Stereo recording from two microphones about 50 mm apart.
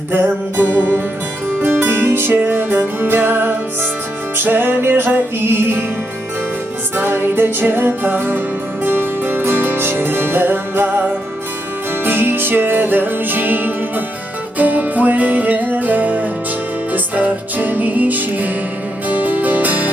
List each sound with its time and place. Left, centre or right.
0.1 s music: right
6.9 s music: right
12.0 s music: right